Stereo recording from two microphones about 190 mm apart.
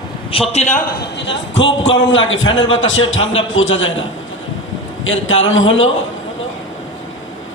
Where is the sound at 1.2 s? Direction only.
70° left (ahead or behind); by 3.9 s 90° left.